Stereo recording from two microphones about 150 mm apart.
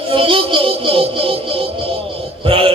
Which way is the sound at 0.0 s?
35° right (ahead or behind).